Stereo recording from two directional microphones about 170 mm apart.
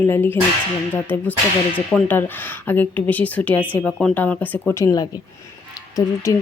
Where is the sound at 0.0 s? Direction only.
15° left (ahead or behind).